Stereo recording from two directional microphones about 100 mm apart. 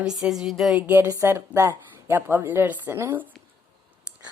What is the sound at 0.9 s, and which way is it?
Speech, 25° right (ahead or behind).